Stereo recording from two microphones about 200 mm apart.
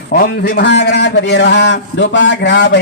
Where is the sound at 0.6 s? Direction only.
60° left (ahead or behind).